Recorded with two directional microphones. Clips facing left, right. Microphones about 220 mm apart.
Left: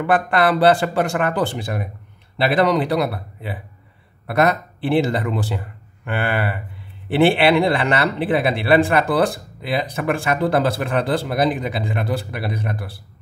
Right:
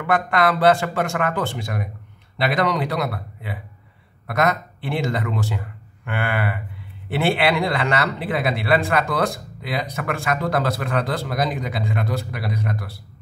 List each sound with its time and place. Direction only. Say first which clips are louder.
0.0 s speech: left 2 dB; 30° left (ahead or behind)